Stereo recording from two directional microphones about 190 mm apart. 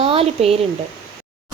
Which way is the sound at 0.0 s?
30° right (ahead or behind).